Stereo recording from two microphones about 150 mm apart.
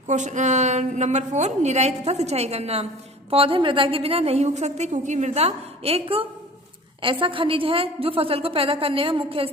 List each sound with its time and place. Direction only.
0.1 s a woman's voice: 55° right (ahead or behind); by 9.5 s 35° right (ahead or behind)